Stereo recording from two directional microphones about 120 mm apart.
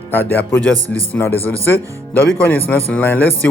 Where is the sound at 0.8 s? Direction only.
30° right (ahead or behind).